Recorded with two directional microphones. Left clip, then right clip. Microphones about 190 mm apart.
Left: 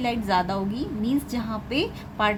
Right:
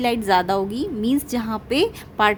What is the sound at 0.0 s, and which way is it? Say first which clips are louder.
A woman's voice: right 5 dB; 50° right (ahead or behind).